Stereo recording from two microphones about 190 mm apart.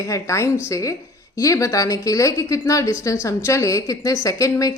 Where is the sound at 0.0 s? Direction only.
15° left (ahead or behind).